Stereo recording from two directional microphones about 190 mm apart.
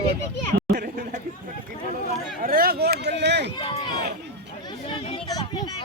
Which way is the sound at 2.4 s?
50° right (ahead or behind).